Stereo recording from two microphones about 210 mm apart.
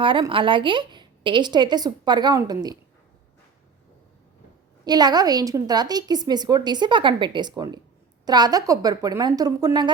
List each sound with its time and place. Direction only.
0.0 s a woman's voice: 25° right (ahead or behind)
4.9 s a woman's voice: 20° right (ahead or behind)